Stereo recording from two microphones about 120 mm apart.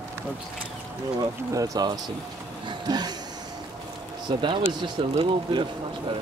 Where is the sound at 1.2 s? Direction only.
30° right (ahead or behind).